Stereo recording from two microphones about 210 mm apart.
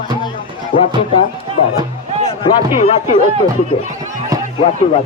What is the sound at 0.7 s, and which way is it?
Speech, 65° left (ahead or behind).